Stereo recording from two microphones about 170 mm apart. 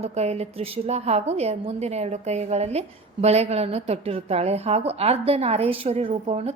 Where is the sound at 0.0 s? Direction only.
40° right (ahead or behind).